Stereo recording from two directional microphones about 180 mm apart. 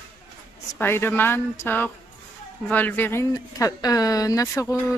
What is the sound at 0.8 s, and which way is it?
A woman's voice, 10° left (ahead or behind).